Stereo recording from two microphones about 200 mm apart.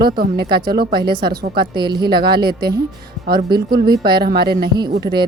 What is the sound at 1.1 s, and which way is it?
Speech, 25° right (ahead or behind).